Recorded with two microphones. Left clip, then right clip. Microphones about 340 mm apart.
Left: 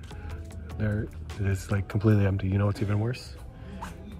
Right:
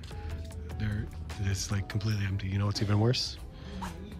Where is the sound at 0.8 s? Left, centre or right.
Centre.